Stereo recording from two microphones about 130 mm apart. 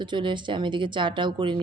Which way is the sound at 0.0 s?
35° right (ahead or behind).